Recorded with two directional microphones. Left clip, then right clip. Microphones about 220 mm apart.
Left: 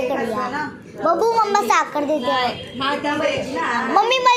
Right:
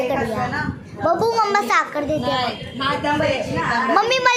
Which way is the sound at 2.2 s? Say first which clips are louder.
Left 2 dB; 40° right (ahead or behind).